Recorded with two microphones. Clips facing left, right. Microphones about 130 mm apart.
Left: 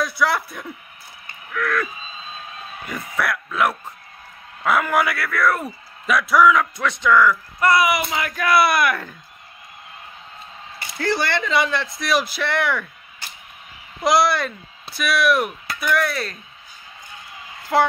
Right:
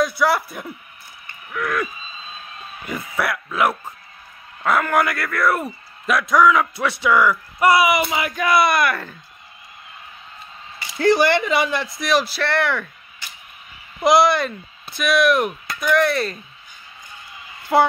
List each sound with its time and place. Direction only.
0.0 s speech: centre (ahead or behind)
1.5 s a man's voice: 15° right (ahead or behind)
2.9 s speech: centre (ahead or behind)
4.6 s speech: centre (ahead or behind)
6.6 s speech: 10° right (ahead or behind)
11.1 s a man's voice: 15° right (ahead or behind)
12.1 s speech: 10° left (ahead or behind)
14.0 s speech: centre (ahead or behind)
17.7 s a man's voice: 10° right (ahead or behind)